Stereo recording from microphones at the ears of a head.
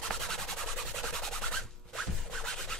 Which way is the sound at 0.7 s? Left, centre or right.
Right.